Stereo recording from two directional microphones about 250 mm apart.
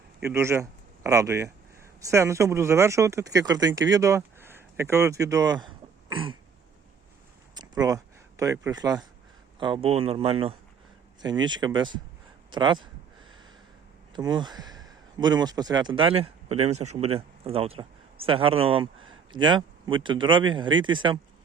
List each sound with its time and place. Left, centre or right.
0.3 s speech: centre
7.5 s a sound: centre
9.6 s speech: centre
14.1 s speech: centre